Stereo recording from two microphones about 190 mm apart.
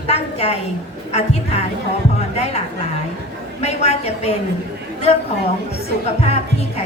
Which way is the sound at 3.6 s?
35° left (ahead or behind).